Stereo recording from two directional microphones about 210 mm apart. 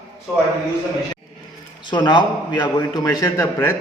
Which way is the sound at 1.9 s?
20° left (ahead or behind).